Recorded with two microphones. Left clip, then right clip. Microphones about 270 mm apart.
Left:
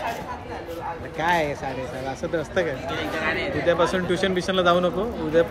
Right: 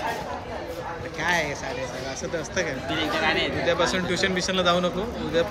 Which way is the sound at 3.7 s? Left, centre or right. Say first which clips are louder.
Left 5 dB; centre.